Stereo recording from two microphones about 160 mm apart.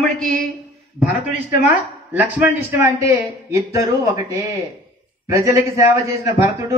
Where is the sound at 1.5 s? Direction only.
10° right (ahead or behind).